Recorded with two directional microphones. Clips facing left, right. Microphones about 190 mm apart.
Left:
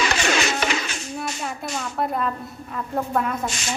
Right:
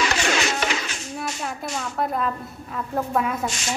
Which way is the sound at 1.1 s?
Centre (ahead or behind).